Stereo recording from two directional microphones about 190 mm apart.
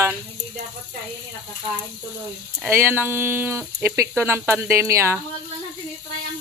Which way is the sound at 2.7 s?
10° right (ahead or behind).